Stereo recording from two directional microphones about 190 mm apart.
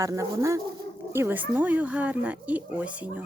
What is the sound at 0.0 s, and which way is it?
Speech, 15° right (ahead or behind).